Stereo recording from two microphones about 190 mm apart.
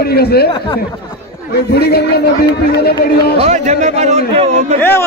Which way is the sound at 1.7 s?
55° left (ahead or behind).